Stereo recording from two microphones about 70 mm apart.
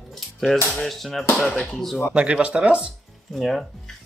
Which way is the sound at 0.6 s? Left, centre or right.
Centre.